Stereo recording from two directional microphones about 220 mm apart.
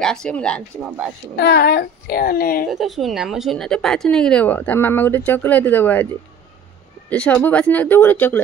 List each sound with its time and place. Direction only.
0.0 s speech: 5° left (ahead or behind)
1.3 s a child's voice: 45° left (ahead or behind)
2.7 s speech: centre (ahead or behind)
7.1 s speech: 5° left (ahead or behind)